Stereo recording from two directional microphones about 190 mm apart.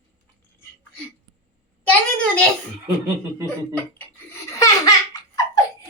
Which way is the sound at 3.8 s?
10° left (ahead or behind).